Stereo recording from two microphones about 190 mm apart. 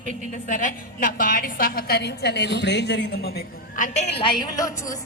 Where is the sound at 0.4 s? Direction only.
45° left (ahead or behind).